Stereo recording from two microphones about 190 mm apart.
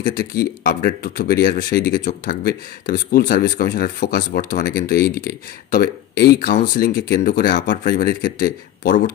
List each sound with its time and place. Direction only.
0.1 s speech: 55° left (ahead or behind)